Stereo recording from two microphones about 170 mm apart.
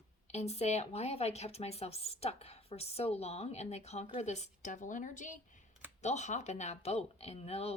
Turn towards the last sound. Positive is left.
turn(degrees=35)  # may be behind; listen again after turning